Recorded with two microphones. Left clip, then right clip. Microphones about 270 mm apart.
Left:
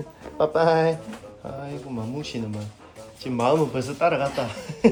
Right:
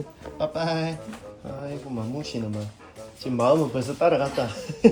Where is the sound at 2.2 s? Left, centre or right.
Centre.